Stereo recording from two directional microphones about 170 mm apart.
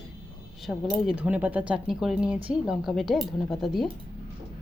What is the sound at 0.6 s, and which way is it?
Speech, centre (ahead or behind).